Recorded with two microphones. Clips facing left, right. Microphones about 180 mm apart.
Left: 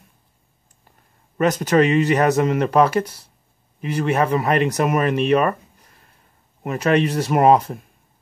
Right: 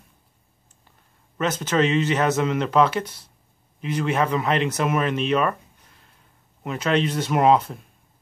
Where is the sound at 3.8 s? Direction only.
45° left (ahead or behind).